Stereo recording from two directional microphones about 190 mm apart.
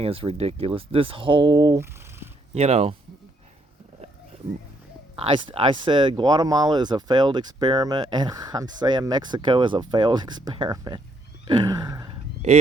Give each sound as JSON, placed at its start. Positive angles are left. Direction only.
{"t": 0.0, "sound": "speech", "side_deg": -30}
{"t": 2.6, "sound": "speech", "side_deg": -35}
{"t": 5.1, "sound": "speech", "side_deg": -30}
{"t": 11.4, "sound": "a sound", "side_deg": -20}